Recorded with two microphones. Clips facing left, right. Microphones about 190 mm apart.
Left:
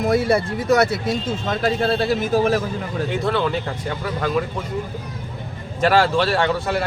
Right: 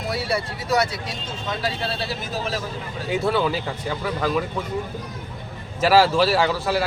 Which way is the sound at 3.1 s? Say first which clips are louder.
Right 1 dB; 5° right (ahead or behind).